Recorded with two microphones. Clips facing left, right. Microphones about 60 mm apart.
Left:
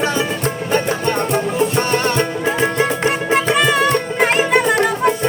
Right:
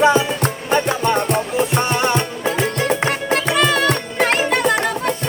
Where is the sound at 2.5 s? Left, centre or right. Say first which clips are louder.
Right 1 dB; left.